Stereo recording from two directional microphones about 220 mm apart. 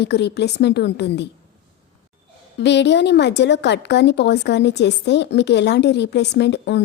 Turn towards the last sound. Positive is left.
turn(degrees=50)  # may be behind; listen again after turning